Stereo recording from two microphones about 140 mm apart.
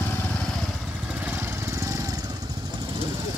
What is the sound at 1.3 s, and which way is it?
Lawn mower, 20° right (ahead or behind).